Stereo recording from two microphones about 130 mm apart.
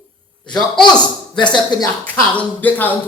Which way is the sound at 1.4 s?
35° left (ahead or behind).